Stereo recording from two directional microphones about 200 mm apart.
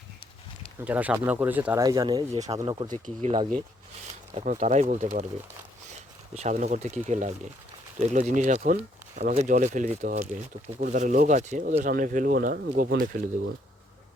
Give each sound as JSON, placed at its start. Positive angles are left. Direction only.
{"t": 0.9, "sound": "speech", "side_deg": -5}
{"t": 2.3, "sound": "speech", "side_deg": -30}
{"t": 2.6, "sound": "speech", "side_deg": -20}
{"t": 2.9, "sound": "speech", "side_deg": -40}
{"t": 6.3, "sound": "speech", "side_deg": -35}